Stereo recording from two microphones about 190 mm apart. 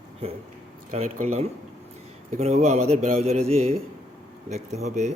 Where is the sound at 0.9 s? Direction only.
35° right (ahead or behind).